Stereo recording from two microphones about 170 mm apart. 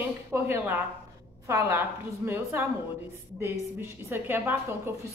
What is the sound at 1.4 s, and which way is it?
A woman's voice, 15° right (ahead or behind).